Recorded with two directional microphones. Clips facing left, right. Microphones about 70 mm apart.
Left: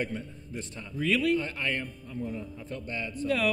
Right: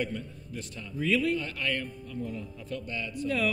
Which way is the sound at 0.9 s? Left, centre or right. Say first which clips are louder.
Even; left.